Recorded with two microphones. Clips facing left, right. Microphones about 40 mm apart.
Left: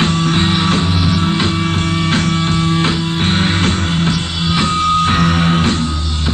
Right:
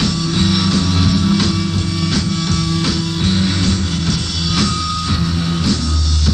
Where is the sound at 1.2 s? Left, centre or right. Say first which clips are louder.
Even; left.